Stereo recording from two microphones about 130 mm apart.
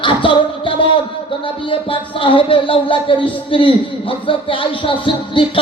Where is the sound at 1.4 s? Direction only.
40° left (ahead or behind).